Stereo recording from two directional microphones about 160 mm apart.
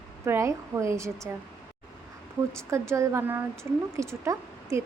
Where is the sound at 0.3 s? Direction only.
15° right (ahead or behind).